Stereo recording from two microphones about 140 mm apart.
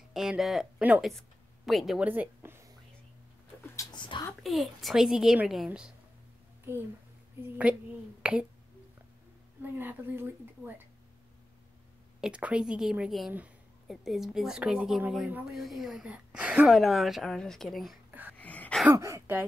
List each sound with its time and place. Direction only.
0.1 s a woman's voice: 5° right (ahead or behind)
2.0 s a woman's voice: 15° right (ahead or behind)
3.7 s a sound: 30° left (ahead or behind)
4.3 s a woman's voice: centre (ahead or behind)
6.7 s a child's voice: 15° right (ahead or behind)
9.6 s a woman's voice: 15° right (ahead or behind)
12.2 s a woman's voice: 10° right (ahead or behind)
18.4 s a sound: 10° left (ahead or behind)
18.9 s a woman's voice: 20° right (ahead or behind)